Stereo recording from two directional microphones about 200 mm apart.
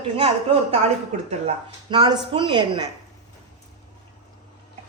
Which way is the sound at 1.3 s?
25° right (ahead or behind).